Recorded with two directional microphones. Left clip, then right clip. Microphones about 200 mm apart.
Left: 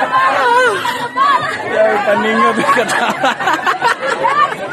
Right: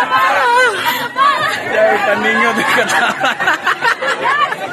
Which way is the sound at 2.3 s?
20° left (ahead or behind).